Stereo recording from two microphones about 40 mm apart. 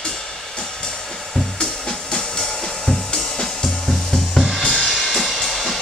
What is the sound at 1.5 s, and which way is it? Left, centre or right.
Music, centre.